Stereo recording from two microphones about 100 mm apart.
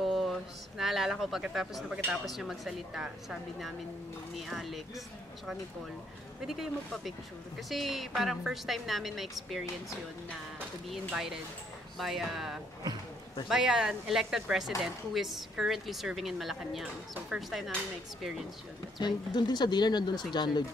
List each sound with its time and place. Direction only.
0.0 s a woman's voice: centre (ahead or behind)
6.4 s a woman's voice: 5° right (ahead or behind)
18.9 s speech: 45° left (ahead or behind)